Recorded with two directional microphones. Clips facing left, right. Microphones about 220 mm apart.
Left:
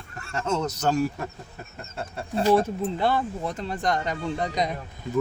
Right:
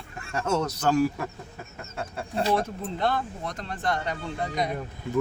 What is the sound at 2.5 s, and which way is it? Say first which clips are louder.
Speech: left 5 dB; 5° left (ahead or behind).